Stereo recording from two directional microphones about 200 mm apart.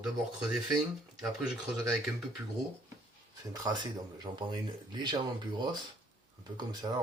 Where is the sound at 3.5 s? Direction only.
20° right (ahead or behind).